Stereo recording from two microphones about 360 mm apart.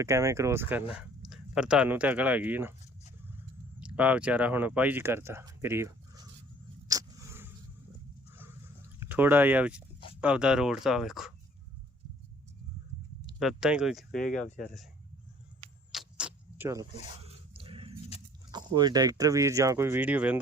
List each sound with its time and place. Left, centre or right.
0.0 s speech: centre
6.8 s a sound: centre
9.0 s speech: centre
13.4 s speech: centre
15.9 s vehicle: centre
17.5 s a sound: centre
18.5 s speech: centre